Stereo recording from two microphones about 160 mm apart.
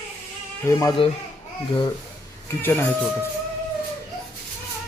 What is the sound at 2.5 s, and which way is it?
Speech, 15° left (ahead or behind).